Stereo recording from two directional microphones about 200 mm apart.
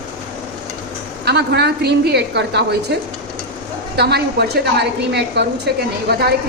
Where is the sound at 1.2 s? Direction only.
55° right (ahead or behind).